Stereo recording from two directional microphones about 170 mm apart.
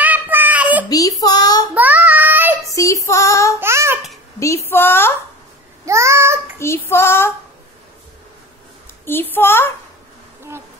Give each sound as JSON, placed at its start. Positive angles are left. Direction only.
{"t": 0.0, "sound": "child singing", "side_deg": -10}
{"t": 0.8, "sound": "a child's voice", "side_deg": 20}
{"t": 1.2, "sound": "child singing", "side_deg": 25}
{"t": 1.8, "sound": "child singing", "side_deg": -10}
{"t": 2.7, "sound": "female singing", "side_deg": 20}
{"t": 3.5, "sound": "babbling", "side_deg": -15}
{"t": 4.4, "sound": "speech", "side_deg": 15}
{"t": 5.9, "sound": "babbling", "side_deg": -15}
{"t": 6.6, "sound": "child singing", "side_deg": 15}
{"t": 9.0, "sound": "child singing", "side_deg": 10}